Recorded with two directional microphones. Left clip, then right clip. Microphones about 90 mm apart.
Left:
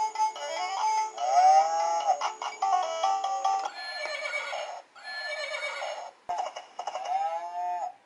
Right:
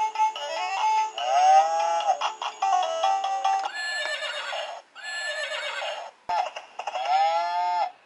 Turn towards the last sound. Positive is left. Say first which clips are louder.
# right 7 dB
turn(degrees=-15)  # may be behind; listen again after turning